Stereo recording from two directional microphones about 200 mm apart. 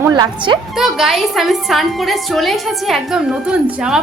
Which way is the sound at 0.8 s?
Centre (ahead or behind).